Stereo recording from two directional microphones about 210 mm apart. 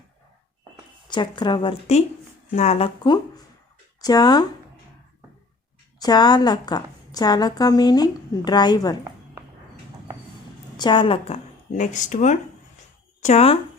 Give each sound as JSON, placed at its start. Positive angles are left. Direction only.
{"t": 1.1, "sound": "a woman's voice", "side_deg": 20}
{"t": 6.0, "sound": "a woman's voice", "side_deg": 20}
{"t": 10.8, "sound": "a woman's voice", "side_deg": 20}